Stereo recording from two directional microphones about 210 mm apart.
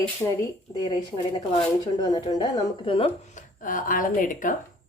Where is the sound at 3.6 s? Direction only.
40° left (ahead or behind).